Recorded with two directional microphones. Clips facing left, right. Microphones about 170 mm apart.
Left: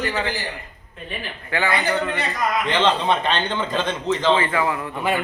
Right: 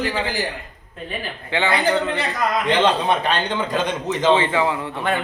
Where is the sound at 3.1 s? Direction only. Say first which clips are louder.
Right 1 dB; 10° right (ahead or behind).